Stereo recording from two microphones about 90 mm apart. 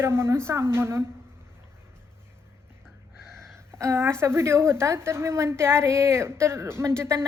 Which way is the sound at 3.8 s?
30° right (ahead or behind).